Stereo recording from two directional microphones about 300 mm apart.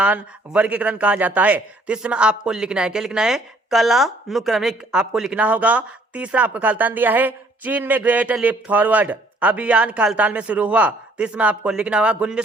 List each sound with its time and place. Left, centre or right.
0.0 s speech: centre